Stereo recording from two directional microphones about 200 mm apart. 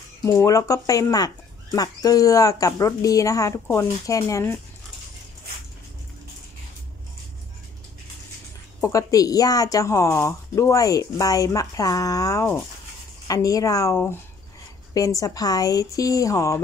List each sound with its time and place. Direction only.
0.2 s speech: 15° left (ahead or behind)
8.8 s speech: 15° left (ahead or behind)